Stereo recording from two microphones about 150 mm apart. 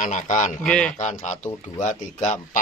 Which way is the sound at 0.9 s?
55° left (ahead or behind).